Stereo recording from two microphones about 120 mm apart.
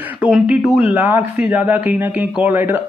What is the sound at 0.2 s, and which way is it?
Speech, 10° right (ahead or behind).